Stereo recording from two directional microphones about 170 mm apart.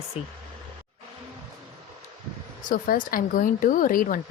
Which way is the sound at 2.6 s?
55° left (ahead or behind).